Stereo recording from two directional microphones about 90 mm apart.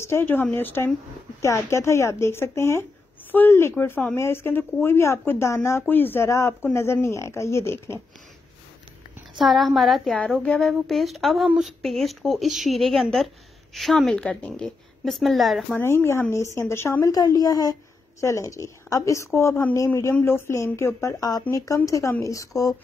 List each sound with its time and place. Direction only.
0.0 s a woman's voice: 25° left (ahead or behind)
9.4 s a woman's voice: centre (ahead or behind)
15.8 s speech: 30° left (ahead or behind)
17.1 s a woman's voice: 45° left (ahead or behind)